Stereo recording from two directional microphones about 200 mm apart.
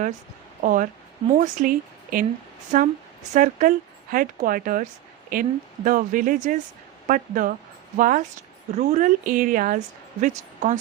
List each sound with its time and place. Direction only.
0.6 s a woman's voice: 40° right (ahead or behind)